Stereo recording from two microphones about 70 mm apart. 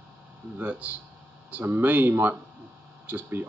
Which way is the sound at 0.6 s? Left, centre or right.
Right.